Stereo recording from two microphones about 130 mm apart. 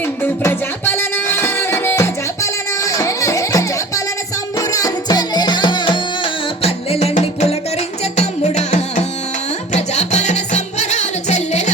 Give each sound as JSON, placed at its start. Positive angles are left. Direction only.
{"t": 0.2, "sound": "music", "side_deg": 15}